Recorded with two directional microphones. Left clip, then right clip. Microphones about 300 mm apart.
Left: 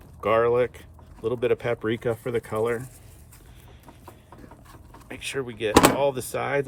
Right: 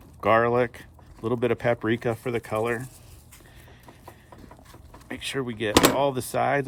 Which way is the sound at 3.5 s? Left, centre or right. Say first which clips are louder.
Left 1 dB; right.